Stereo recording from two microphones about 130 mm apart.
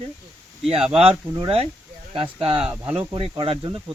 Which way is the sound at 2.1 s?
45° right (ahead or behind).